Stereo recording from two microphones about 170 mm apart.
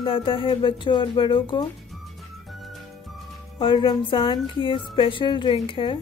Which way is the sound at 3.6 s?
30° left (ahead or behind).